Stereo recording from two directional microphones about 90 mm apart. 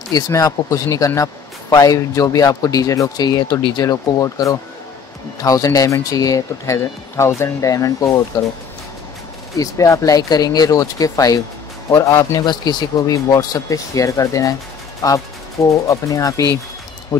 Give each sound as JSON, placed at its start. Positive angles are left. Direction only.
{"t": 0.3, "sound": "speech", "side_deg": 40}
{"t": 3.6, "sound": "speech", "side_deg": 50}
{"t": 9.6, "sound": "speech", "side_deg": 35}
{"t": 12.4, "sound": "speech", "side_deg": 50}